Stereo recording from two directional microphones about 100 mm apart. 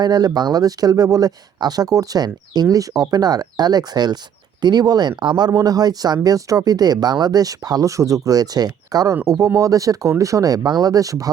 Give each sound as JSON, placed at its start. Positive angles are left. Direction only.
{"t": 0.0, "sound": "speech", "side_deg": -40}